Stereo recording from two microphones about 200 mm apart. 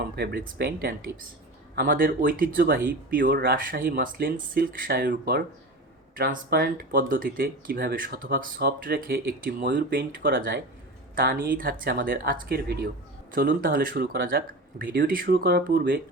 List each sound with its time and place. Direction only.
0.0 s speech: 50° right (ahead or behind)